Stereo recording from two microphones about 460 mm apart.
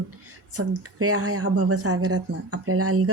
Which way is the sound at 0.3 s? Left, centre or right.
Right.